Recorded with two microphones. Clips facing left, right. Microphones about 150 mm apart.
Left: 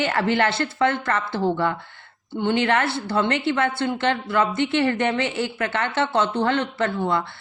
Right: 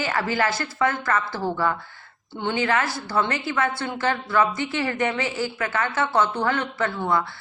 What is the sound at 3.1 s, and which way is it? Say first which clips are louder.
Speech: left 2 dB; 60° left (ahead or behind).